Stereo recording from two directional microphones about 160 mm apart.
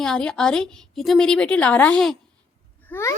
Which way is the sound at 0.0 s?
5° left (ahead or behind).